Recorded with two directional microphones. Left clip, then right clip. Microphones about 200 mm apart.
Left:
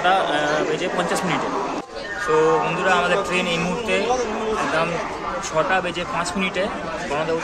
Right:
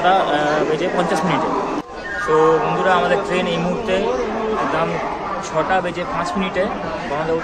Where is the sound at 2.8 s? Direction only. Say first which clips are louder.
Right 3 dB; 10° left (ahead or behind).